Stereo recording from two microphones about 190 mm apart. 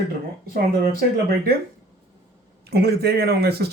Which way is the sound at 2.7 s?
55° right (ahead or behind).